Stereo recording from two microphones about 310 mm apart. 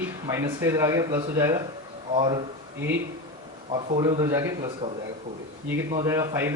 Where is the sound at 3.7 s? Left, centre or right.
Centre.